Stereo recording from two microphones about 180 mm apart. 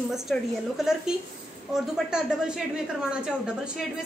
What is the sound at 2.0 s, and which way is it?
A woman's voice, 5° right (ahead or behind).